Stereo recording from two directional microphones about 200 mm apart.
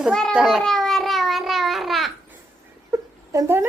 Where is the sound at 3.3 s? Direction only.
10° right (ahead or behind).